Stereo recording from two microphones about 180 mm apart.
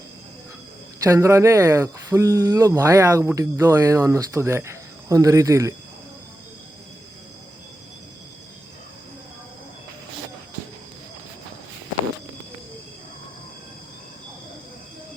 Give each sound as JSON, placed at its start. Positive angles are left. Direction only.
{"t": 1.0, "sound": "speech", "side_deg": -15}